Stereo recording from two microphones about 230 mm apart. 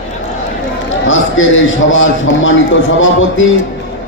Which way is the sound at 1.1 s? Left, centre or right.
Left.